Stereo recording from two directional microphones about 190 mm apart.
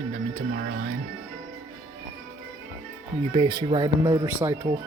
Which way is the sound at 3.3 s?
25° right (ahead or behind).